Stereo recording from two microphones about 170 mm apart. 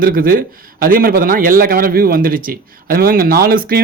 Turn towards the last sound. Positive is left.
turn(degrees=-60)  # may be behind; listen again after turning